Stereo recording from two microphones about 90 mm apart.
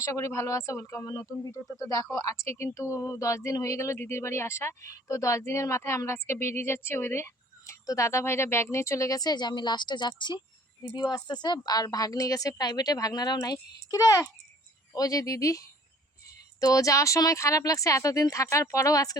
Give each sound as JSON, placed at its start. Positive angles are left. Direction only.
{"t": 0.0, "sound": "speech", "side_deg": 35}
{"t": 2.1, "sound": "a woman's voice", "side_deg": 35}